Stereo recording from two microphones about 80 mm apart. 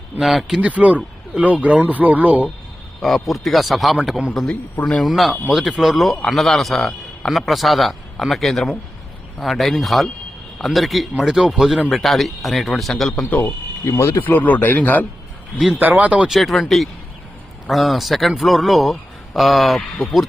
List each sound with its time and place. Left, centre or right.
0.2 s a man's voice: centre
0.6 s speech: centre
3.0 s a man's voice: centre
4.8 s speech: centre
5.0 s a man's voice: centre
13.3 s speech: left
13.9 s speech: left
15.8 s speech: centre
16.3 s a man's voice: centre